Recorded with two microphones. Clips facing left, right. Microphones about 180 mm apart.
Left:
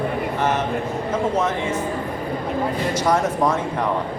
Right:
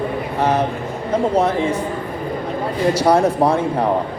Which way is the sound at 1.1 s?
35° right (ahead or behind).